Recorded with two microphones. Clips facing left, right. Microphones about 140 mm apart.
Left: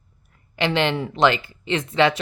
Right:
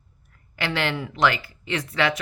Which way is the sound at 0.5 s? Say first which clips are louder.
Left 5 dB; 20° left (ahead or behind).